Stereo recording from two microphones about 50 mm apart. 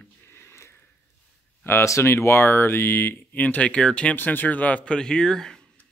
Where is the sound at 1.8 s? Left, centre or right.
Left.